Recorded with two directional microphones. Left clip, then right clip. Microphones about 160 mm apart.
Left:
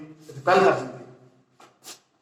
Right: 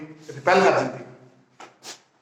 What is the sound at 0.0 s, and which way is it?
Speech, 20° right (ahead or behind).